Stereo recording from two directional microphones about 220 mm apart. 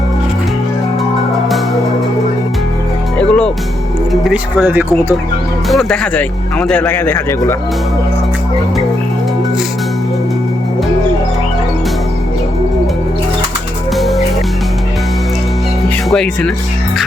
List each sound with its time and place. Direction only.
3.2 s music: 5° left (ahead or behind)
4.1 s speech: centre (ahead or behind)
5.6 s speech: centre (ahead or behind)
13.9 s music: centre (ahead or behind)
16.0 s speech: 5° left (ahead or behind)